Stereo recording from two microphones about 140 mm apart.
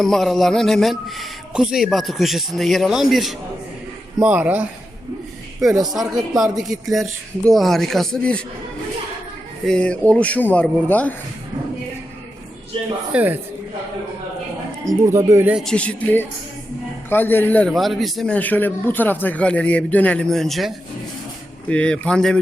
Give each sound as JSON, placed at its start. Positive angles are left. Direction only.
{"t": 0.0, "sound": "speech", "side_deg": 0}
{"t": 5.9, "sound": "speech", "side_deg": -5}
{"t": 9.6, "sound": "a man's voice", "side_deg": 5}
{"t": 13.1, "sound": "speech", "side_deg": -15}
{"t": 14.8, "sound": "speech", "side_deg": -20}
{"t": 15.5, "sound": "a man's voice", "side_deg": 5}
{"t": 17.7, "sound": "speech", "side_deg": 0}
{"t": 18.3, "sound": "a man's voice", "side_deg": 10}